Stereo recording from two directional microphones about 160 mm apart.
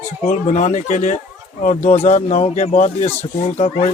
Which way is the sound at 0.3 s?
50° left (ahead or behind).